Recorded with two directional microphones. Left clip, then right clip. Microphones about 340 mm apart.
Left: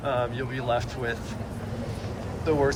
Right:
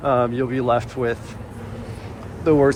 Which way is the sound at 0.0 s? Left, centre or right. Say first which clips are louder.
Right 8 dB; centre.